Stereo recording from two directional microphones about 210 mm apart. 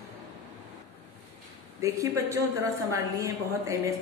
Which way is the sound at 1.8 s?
15° right (ahead or behind).